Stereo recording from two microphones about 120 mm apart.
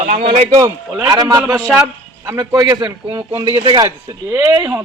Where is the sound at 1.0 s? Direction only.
30° right (ahead or behind).